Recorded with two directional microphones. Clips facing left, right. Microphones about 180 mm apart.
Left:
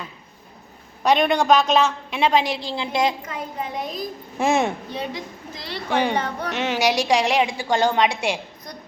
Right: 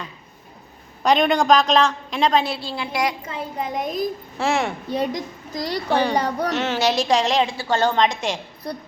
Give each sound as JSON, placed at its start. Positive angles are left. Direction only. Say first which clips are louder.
{"t": 1.0, "sound": "a woman's voice", "louder": "right 1 dB", "side_deg": 0}
{"t": 3.2, "sound": "a woman's voice", "louder": "right 2 dB", "side_deg": -30}
{"t": 3.8, "sound": "a woman's voice", "louder": "right 6 dB", "side_deg": -50}
{"t": 4.4, "sound": "a child's voice", "louder": "left 3 dB", "side_deg": 20}
{"t": 4.9, "sound": "a woman's voice", "louder": "right 6 dB", "side_deg": -40}
{"t": 6.5, "sound": "a woman's voice", "louder": "left 3 dB", "side_deg": 15}
{"t": 8.7, "sound": "a woman's voice", "louder": "right 11 dB", "side_deg": -30}